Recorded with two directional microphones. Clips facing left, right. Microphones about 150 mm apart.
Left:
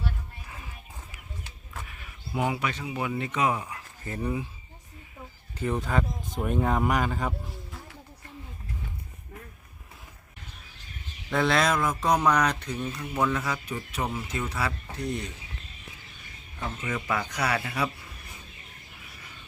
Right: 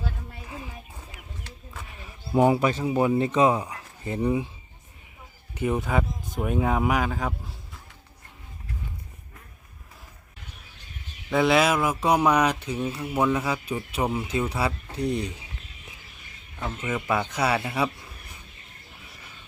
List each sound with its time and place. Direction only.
2.0 s speech: 30° right (ahead or behind)
5.5 s speech: 10° right (ahead or behind)
11.3 s speech: 5° right (ahead or behind)
14.4 s speech: 30° right (ahead or behind)
16.8 s speech: 10° right (ahead or behind)
17.4 s speech: 20° right (ahead or behind)